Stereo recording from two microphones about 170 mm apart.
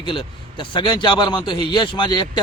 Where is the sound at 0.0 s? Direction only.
30° left (ahead or behind).